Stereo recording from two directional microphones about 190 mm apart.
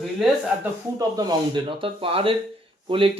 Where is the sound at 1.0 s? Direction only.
20° right (ahead or behind).